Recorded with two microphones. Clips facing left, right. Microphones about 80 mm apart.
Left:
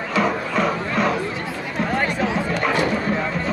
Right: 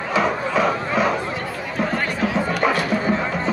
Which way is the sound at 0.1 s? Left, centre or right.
Centre.